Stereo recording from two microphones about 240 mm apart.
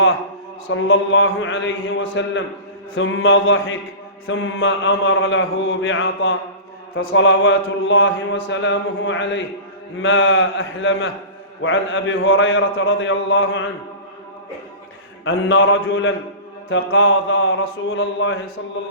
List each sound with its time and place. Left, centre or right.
0.7 s mantra: left
2.9 s speech: left
6.9 s mantra: left
10.0 s speech: left
15.2 s mantra: left
16.6 s speech: left